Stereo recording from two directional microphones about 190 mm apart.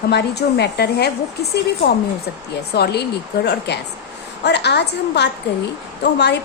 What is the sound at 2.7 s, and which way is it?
A woman's voice, 60° left (ahead or behind).